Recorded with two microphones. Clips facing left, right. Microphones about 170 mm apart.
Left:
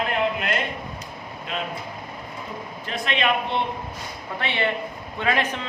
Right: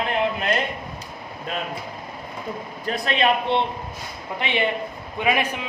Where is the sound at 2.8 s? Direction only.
40° right (ahead or behind).